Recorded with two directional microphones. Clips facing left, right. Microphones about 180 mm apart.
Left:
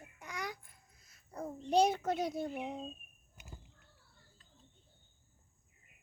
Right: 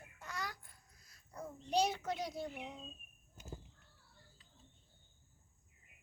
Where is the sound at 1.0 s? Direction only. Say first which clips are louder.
Left 5 dB; 25° left (ahead or behind).